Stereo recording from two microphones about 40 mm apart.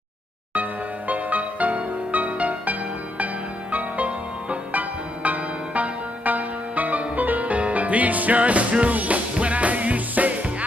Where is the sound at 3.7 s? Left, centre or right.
Right.